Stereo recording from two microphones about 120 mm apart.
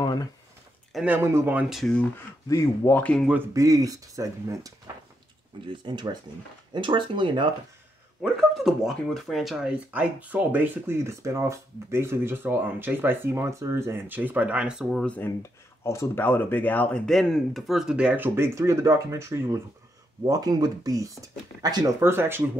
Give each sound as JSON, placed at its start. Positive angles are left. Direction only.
{"t": 0.0, "sound": "a sound", "side_deg": 35}
{"t": 1.0, "sound": "speech", "side_deg": -20}
{"t": 1.7, "sound": "speech", "side_deg": 5}
{"t": 2.4, "sound": "speech", "side_deg": 25}
{"t": 3.5, "sound": "speech", "side_deg": -30}
{"t": 5.7, "sound": "speech", "side_deg": -40}
{"t": 8.2, "sound": "speech", "side_deg": 0}
{"t": 9.8, "sound": "speech", "side_deg": -15}
{"t": 15.0, "sound": "speech", "side_deg": 15}
{"t": 22.0, "sound": "speech", "side_deg": -20}